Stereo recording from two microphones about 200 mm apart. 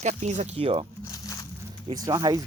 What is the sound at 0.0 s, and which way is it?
Speech, 35° right (ahead or behind).